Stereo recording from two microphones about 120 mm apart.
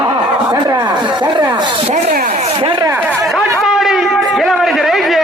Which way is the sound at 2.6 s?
50° right (ahead or behind).